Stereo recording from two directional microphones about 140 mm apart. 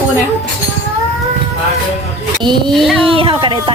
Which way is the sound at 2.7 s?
5° right (ahead or behind).